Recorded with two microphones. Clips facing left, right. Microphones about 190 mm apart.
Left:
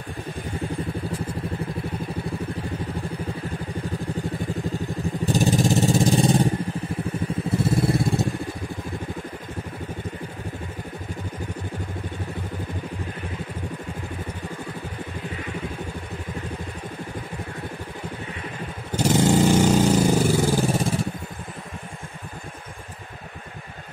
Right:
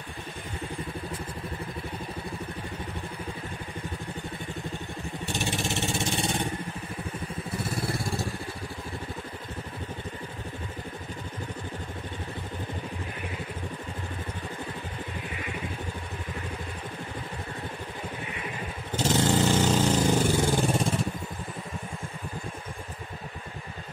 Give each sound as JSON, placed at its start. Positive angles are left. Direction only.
{"t": 5.2, "sound": "vehicle", "side_deg": 40}
{"t": 7.6, "sound": "vehicle", "side_deg": 20}
{"t": 18.9, "sound": "vehicle", "side_deg": 15}